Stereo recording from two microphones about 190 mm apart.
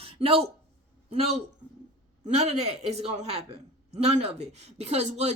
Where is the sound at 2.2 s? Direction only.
35° right (ahead or behind).